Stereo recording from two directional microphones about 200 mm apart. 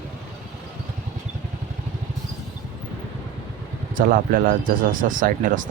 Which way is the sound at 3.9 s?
45° right (ahead or behind).